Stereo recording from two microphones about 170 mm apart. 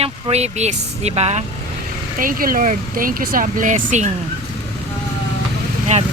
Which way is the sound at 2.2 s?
55° right (ahead or behind).